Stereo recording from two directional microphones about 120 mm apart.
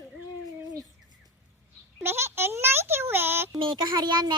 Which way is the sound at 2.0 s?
20° right (ahead or behind).